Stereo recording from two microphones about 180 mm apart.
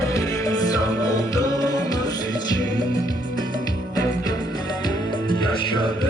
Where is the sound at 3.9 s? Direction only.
20° left (ahead or behind).